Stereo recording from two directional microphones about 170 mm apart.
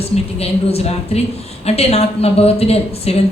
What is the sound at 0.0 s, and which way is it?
A woman's voice, 35° left (ahead or behind).